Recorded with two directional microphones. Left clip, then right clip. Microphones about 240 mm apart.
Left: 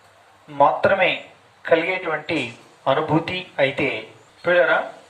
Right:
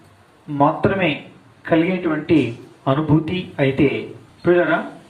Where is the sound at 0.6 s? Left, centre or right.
Left.